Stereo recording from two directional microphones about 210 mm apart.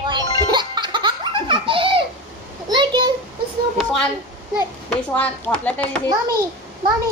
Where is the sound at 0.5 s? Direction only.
20° right (ahead or behind).